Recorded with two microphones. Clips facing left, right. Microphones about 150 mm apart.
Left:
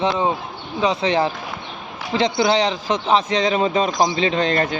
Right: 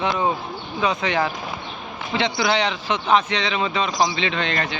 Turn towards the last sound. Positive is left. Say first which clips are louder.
# left 6 dB
turn(degrees=35)  # may be behind; listen again after turning